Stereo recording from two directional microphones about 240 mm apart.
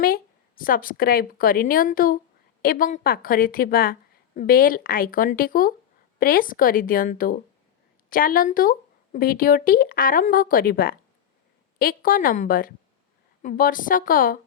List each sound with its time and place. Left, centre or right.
0.0 s a woman's voice: left